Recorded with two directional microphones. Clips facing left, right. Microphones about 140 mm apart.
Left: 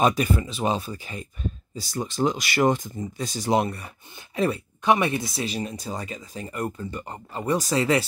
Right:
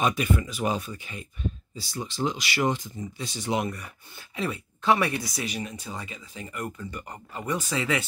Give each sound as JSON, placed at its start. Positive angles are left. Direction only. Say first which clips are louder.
{"t": 0.0, "sound": "speech", "louder": "left 4 dB", "side_deg": 35}
{"t": 4.8, "sound": "speech", "louder": "left 2 dB", "side_deg": 20}